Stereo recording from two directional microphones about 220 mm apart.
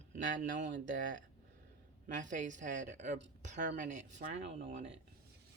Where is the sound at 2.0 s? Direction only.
35° right (ahead or behind).